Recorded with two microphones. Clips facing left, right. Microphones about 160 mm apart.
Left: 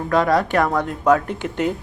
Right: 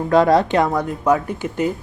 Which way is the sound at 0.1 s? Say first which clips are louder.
Right 3 dB; 25° right (ahead or behind).